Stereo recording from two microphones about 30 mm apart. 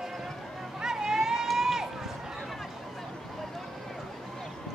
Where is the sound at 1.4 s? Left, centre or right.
Centre.